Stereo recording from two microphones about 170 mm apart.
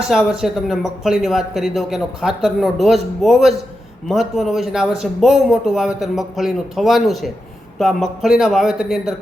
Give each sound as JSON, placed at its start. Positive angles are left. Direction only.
{"t": 0.1, "sound": "speech", "side_deg": 0}